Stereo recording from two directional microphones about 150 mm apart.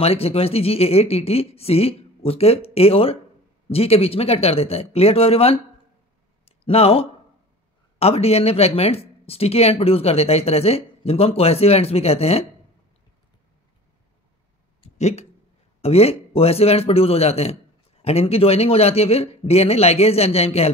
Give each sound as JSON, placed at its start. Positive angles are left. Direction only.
{"t": 0.0, "sound": "speech", "side_deg": 40}
{"t": 6.4, "sound": "a sound", "side_deg": 40}
{"t": 8.0, "sound": "speech", "side_deg": 45}
{"t": 15.0, "sound": "speech", "side_deg": 45}